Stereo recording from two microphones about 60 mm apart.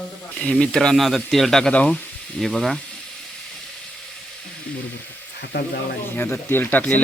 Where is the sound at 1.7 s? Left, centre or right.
Left.